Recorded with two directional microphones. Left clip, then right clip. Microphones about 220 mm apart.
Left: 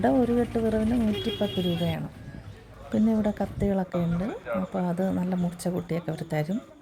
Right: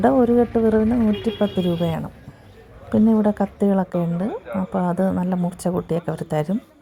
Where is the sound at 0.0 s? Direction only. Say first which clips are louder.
Right 7 dB; 15° right (ahead or behind).